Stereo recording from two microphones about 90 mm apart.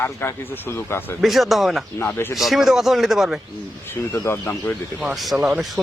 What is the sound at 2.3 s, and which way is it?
Speech, centre (ahead or behind).